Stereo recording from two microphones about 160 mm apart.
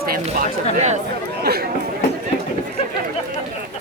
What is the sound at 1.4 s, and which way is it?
Speech, 80° right.